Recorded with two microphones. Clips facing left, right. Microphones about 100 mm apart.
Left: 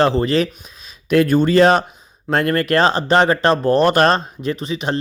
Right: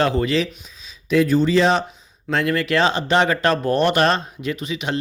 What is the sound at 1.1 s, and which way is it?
Speech, 60° left (ahead or behind).